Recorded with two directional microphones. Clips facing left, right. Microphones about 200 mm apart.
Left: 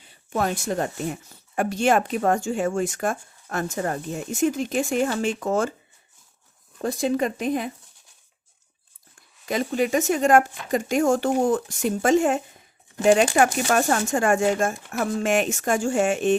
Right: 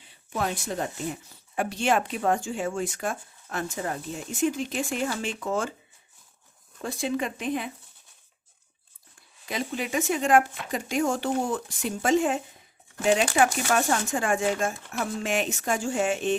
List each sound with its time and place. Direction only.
0.3 s speech: 50° left (ahead or behind)
6.8 s speech: 40° left (ahead or behind)
9.5 s speech: 45° left (ahead or behind)